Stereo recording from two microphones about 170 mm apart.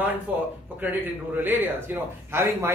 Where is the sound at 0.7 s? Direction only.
10° right (ahead or behind).